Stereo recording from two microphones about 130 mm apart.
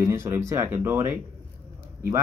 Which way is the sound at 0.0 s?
20° right (ahead or behind).